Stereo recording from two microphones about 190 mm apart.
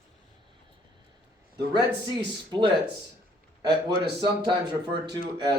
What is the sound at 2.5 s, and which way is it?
Speech, 25° right (ahead or behind).